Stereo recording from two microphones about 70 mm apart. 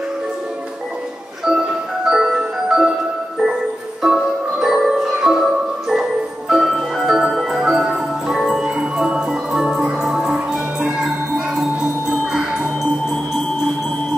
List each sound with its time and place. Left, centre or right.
2.0 s glockenspiel: centre
4.0 s music: centre
6.5 s music: centre